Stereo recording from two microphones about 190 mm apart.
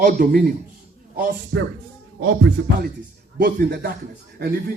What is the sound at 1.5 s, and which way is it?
Speech, 75° right (ahead or behind).